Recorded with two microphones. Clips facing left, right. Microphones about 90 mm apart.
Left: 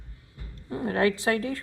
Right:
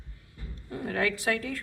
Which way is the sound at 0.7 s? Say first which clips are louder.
Left 5 dB; 30° left (ahead or behind).